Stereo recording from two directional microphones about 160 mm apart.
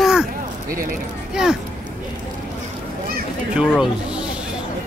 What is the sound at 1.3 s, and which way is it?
Speech, 5° right (ahead or behind).